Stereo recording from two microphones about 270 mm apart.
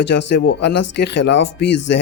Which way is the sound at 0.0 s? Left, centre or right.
Left.